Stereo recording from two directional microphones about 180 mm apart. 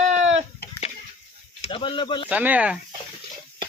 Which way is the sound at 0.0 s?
40° right (ahead or behind).